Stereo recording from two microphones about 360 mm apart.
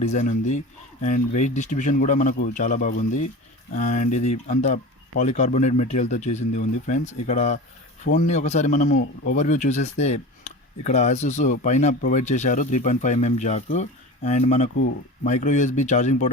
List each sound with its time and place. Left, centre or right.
0.0 s a man's voice: centre